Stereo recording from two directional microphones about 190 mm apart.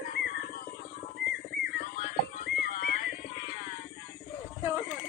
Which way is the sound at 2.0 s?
40° left (ahead or behind).